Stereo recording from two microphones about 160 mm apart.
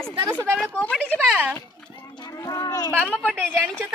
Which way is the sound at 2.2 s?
20° left (ahead or behind).